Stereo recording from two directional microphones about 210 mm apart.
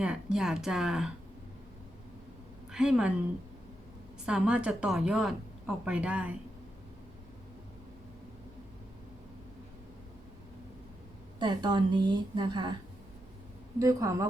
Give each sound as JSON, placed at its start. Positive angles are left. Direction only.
{"t": 0.0, "sound": "a woman's voice", "side_deg": -5}
{"t": 2.7, "sound": "a woman's voice", "side_deg": -5}
{"t": 4.3, "sound": "a woman's voice", "side_deg": -5}
{"t": 11.3, "sound": "a woman's voice", "side_deg": -20}
{"t": 13.7, "sound": "speech", "side_deg": -15}